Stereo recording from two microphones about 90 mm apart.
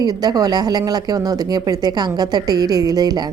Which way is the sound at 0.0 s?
50° right (ahead or behind).